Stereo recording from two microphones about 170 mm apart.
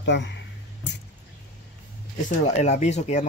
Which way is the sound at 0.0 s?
90° left.